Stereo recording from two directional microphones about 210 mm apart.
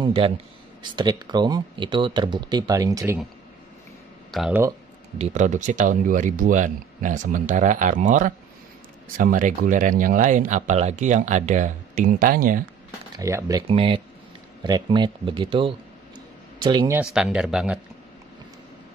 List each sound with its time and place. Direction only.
0.0 s speech: 25° right (ahead or behind)
4.3 s speech: 5° right (ahead or behind)
5.2 s speech: 35° right (ahead or behind)
13.2 s speech: 15° right (ahead or behind)
16.9 s speech: 5° right (ahead or behind)